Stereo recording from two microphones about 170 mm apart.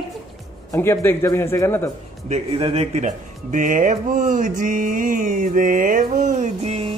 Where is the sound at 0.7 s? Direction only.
15° left (ahead or behind).